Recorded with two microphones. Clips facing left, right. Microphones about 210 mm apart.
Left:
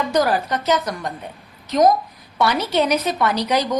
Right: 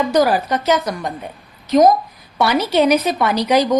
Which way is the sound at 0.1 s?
10° right (ahead or behind).